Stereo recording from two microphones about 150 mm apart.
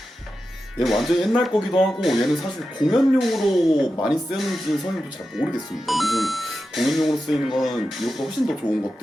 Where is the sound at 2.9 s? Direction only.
Centre (ahead or behind).